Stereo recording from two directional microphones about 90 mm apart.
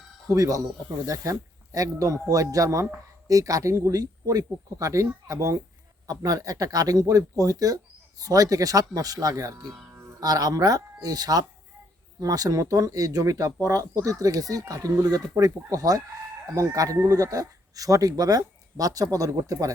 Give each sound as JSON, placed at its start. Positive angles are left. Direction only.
{"t": 0.3, "sound": "speech", "side_deg": -40}
{"t": 9.9, "sound": "music", "side_deg": -30}
{"t": 10.2, "sound": "speech", "side_deg": -40}